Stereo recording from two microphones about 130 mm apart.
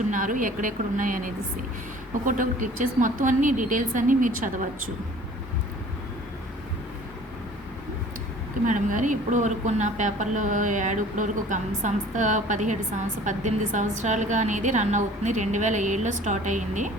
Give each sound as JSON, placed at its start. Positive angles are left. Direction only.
{"t": 0.1, "sound": "a woman's voice", "side_deg": -90}
{"t": 8.6, "sound": "a woman's voice", "side_deg": -80}